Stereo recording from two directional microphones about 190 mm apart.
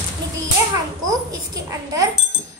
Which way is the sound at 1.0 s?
20° right (ahead or behind).